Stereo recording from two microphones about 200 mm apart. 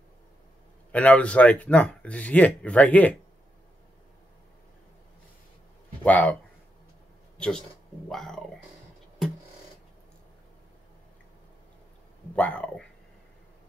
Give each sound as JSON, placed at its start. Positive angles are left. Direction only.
{"t": 0.9, "sound": "speech", "side_deg": 5}
{"t": 6.0, "sound": "speech", "side_deg": 10}
{"t": 7.3, "sound": "speech", "side_deg": 5}
{"t": 12.4, "sound": "speech", "side_deg": 5}